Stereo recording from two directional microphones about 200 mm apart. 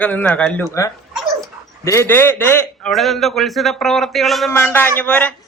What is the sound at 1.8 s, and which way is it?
A man's voice, 15° left (ahead or behind).